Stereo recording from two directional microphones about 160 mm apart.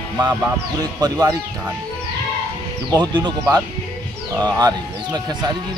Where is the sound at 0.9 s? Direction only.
25° right (ahead or behind).